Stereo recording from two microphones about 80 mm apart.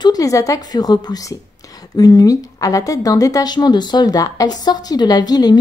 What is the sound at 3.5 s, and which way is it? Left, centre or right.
A woman's voice, left.